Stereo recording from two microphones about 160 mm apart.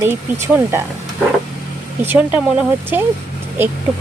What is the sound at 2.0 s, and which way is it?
Speech, 10° right (ahead or behind).